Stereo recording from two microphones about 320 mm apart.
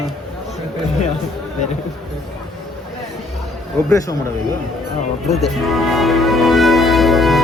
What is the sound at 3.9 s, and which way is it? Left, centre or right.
Speech, centre.